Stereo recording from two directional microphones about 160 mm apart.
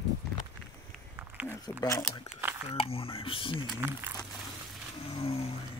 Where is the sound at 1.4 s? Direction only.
5° right (ahead or behind).